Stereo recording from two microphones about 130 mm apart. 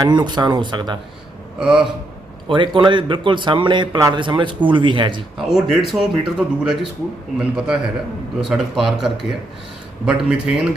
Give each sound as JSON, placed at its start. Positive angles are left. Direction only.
{"t": 0.0, "sound": "speech", "side_deg": -35}
{"t": 1.5, "sound": "speech", "side_deg": -5}
{"t": 2.5, "sound": "speech", "side_deg": -40}
{"t": 5.5, "sound": "speech", "side_deg": 0}